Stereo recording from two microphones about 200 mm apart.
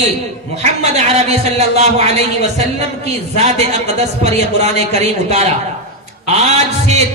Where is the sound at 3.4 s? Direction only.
35° right (ahead or behind).